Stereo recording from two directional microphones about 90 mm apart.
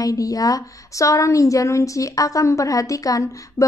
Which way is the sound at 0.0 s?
40° left (ahead or behind).